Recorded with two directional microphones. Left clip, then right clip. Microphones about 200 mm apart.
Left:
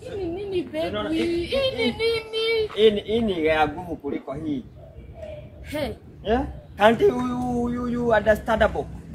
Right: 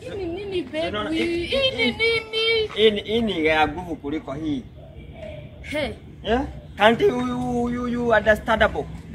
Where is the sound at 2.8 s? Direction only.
30° left (ahead or behind).